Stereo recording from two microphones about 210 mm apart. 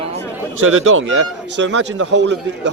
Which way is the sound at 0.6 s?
75° right (ahead or behind).